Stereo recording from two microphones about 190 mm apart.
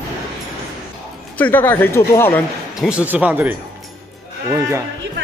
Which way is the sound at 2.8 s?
5° right (ahead or behind).